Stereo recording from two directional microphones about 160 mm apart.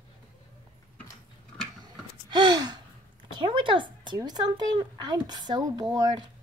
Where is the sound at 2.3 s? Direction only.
25° right (ahead or behind).